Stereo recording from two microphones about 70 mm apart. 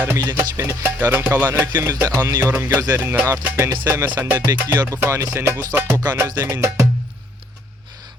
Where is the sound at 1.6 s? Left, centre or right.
Right.